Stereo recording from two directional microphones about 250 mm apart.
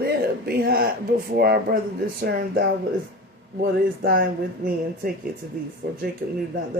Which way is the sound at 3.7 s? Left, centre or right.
Right.